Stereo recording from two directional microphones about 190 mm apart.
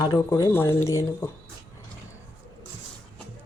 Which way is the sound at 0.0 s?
20° left (ahead or behind).